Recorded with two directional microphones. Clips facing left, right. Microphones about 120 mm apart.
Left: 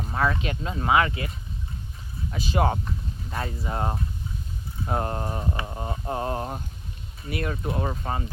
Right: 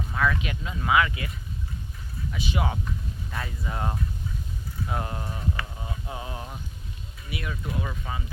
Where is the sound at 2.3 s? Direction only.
40° left (ahead or behind).